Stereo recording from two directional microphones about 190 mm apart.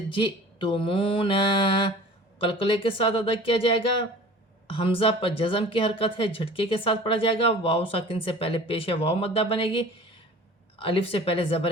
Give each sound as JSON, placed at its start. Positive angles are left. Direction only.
{"t": 0.1, "sound": "speech", "side_deg": 25}